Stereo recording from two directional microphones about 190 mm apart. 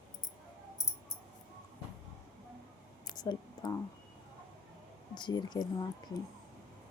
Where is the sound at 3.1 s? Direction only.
20° left (ahead or behind).